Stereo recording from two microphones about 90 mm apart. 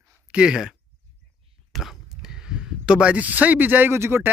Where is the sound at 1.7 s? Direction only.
5° right (ahead or behind).